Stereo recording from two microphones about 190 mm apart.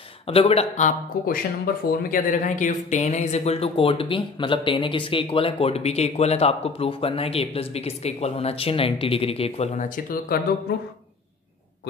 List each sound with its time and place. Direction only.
0.3 s speech: 30° left (ahead or behind); by 10.4 s 50° left (ahead or behind)